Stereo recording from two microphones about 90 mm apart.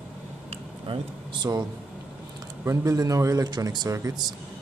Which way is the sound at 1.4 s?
50° right (ahead or behind).